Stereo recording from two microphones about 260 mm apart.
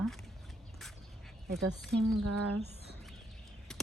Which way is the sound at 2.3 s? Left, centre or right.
Right.